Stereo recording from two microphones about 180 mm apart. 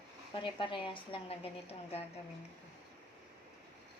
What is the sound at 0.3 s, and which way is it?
A woman's voice, 25° left (ahead or behind).